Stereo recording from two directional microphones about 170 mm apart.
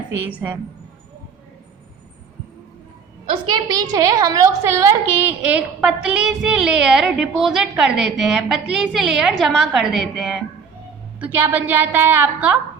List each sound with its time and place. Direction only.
0.2 s a woman's voice: 10° right (ahead or behind)
3.5 s a woman's voice: 20° right (ahead or behind)
4.8 s child singing: 15° right (ahead or behind)
11.2 s a woman's voice: 10° right (ahead or behind)